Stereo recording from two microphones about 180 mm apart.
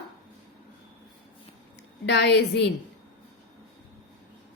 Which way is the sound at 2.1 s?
75° left (ahead or behind).